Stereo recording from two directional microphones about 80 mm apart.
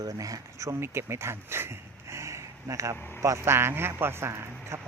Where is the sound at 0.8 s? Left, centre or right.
Right.